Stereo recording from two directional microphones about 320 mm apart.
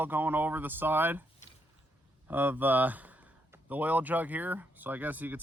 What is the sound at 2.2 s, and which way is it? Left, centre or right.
Speech, centre.